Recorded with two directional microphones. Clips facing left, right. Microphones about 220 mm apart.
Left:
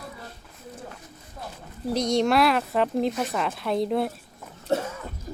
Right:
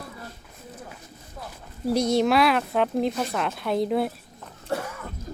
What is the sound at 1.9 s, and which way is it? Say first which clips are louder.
Speech: right 1 dB; 5° right (ahead or behind).